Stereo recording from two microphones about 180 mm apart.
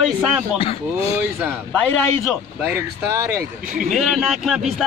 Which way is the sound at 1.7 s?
5° left (ahead or behind).